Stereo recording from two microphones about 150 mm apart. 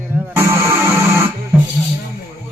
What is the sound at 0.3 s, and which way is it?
Music, 20° right (ahead or behind).